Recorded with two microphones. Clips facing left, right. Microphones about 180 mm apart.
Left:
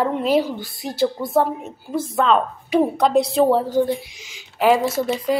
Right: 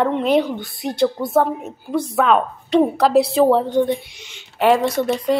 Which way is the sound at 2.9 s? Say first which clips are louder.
Right 2 dB; centre (ahead or behind).